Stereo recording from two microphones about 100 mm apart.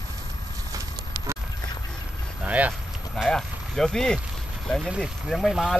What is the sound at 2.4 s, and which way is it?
Vehicle, 15° right (ahead or behind).